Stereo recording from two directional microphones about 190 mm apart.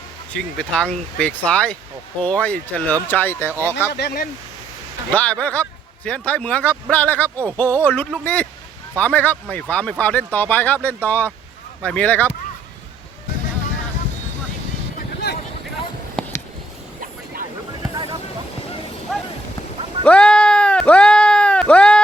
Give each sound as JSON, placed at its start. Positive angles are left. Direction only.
{"t": 0.3, "sound": "speech", "side_deg": 5}
{"t": 3.9, "sound": "speech", "side_deg": 55}
{"t": 5.1, "sound": "speech", "side_deg": 5}
{"t": 16.2, "sound": "a sound", "side_deg": 5}
{"t": 17.9, "sound": "vehicle", "side_deg": -25}
{"t": 20.1, "sound": "sheep", "side_deg": 5}